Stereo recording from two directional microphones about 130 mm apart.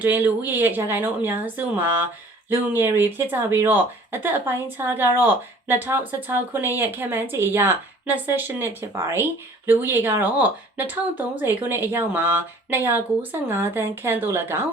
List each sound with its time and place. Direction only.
0.0 s speech: 15° right (ahead or behind)